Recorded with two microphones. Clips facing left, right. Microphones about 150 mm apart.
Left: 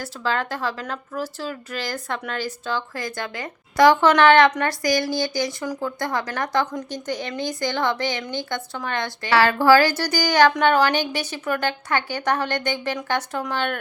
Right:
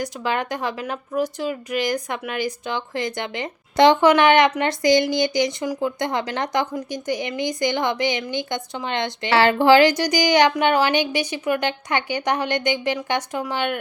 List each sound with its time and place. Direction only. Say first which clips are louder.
0.0 s a woman's voice: right 1 dB; 15° right (ahead or behind)